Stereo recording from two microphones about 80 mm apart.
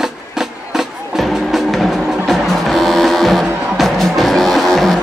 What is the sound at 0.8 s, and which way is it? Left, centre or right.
Music, centre.